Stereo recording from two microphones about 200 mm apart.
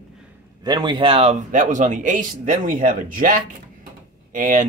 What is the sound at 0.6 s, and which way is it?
Speech, 20° right (ahead or behind).